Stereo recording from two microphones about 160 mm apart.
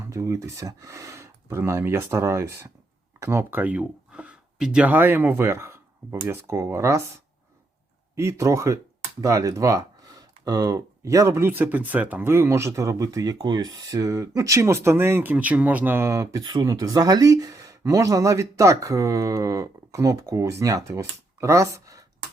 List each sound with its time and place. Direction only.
0.0 s speech: 20° right (ahead or behind)
8.1 s speech: 20° right (ahead or behind)